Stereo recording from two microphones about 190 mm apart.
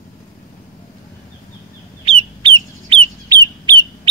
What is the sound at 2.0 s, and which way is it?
Chicken, 30° right (ahead or behind).